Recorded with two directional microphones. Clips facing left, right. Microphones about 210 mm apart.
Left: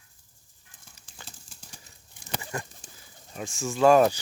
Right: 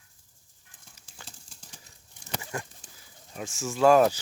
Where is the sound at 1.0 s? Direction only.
5° left (ahead or behind).